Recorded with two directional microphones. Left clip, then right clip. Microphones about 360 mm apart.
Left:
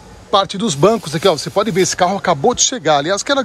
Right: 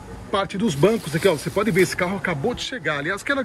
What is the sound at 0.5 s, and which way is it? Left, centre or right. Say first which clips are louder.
Speech: left 6 dB; centre.